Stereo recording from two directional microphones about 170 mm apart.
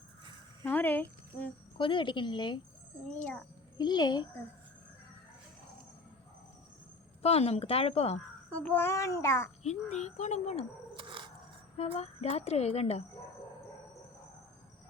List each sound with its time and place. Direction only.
0.6 s speech: 10° left (ahead or behind)
1.8 s a woman's voice: 30° left (ahead or behind)
3.1 s a child's voice: 10° left (ahead or behind)
3.8 s a woman's voice: 25° left (ahead or behind)
7.2 s speech: 35° left (ahead or behind)
8.4 s a child's voice: 10° left (ahead or behind)
9.6 s speech: 40° left (ahead or behind)
10.9 s a sound: 30° right (ahead or behind)
11.8 s speech: 35° left (ahead or behind)